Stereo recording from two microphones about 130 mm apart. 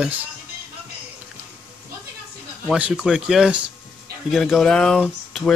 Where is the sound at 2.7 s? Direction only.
5° right (ahead or behind).